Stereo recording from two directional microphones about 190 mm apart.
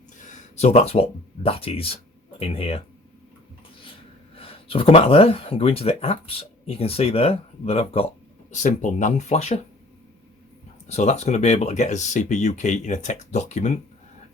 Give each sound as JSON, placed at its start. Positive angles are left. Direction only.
{"t": 0.2, "sound": "speech", "side_deg": 40}
{"t": 4.4, "sound": "speech", "side_deg": 30}
{"t": 10.8, "sound": "speech", "side_deg": 35}